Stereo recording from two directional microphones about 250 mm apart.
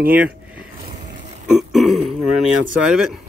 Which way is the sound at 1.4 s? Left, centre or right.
Centre.